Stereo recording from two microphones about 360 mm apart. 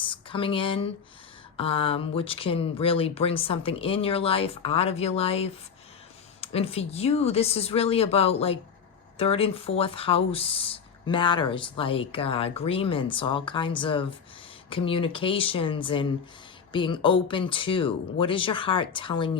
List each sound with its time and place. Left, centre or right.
0.1 s speech: centre